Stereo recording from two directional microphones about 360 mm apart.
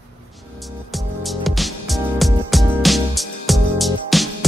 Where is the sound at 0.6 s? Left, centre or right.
Centre.